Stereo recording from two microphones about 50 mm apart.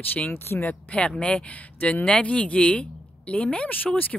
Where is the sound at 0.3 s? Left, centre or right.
Left.